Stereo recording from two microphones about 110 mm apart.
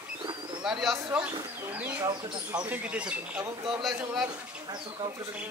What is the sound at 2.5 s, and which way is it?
Speech, 15° right (ahead or behind).